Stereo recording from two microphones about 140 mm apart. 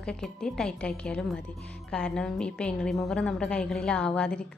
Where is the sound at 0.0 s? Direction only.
5° left (ahead or behind).